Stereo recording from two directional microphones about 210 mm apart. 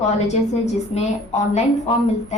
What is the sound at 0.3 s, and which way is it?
Speech, 30° left (ahead or behind).